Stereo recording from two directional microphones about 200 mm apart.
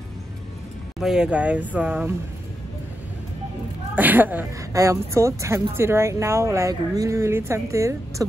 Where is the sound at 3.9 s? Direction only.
10° right (ahead or behind).